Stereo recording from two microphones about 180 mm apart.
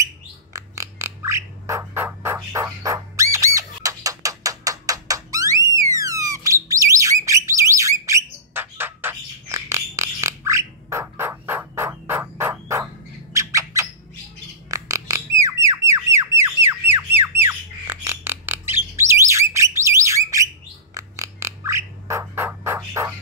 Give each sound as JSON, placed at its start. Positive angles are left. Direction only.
{"t": 0.0, "sound": "bird", "side_deg": -20}
{"t": 13.3, "sound": "squawk", "side_deg": -15}
{"t": 14.7, "sound": "a sound", "side_deg": -20}
{"t": 20.9, "sound": "music", "side_deg": -15}